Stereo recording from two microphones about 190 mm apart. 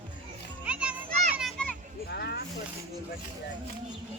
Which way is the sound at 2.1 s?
60° left (ahead or behind).